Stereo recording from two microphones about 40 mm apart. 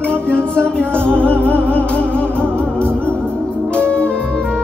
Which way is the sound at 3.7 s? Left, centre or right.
Left.